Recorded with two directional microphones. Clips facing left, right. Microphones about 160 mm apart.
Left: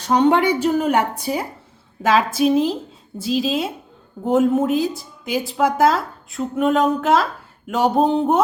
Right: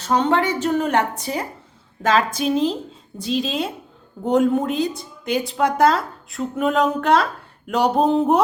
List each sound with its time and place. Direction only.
0.0 s a woman's voice: 15° left (ahead or behind)